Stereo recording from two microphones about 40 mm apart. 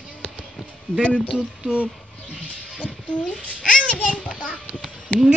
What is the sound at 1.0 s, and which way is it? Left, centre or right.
Speech, left.